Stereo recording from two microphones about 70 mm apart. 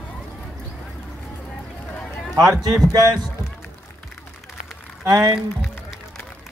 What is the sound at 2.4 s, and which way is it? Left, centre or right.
Speech, right.